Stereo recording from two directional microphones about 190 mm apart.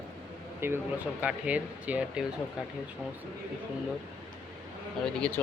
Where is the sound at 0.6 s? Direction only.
15° right (ahead or behind).